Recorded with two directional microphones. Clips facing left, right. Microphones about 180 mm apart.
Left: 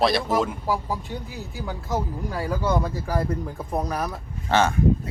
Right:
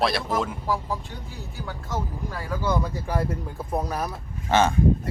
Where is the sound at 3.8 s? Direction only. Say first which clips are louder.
Left 3 dB; 5° right (ahead or behind).